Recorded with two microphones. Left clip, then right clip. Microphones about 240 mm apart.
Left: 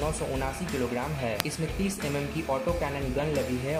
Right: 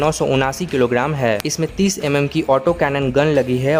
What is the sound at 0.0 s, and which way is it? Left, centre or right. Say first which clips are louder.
Speech: right 14 dB; right.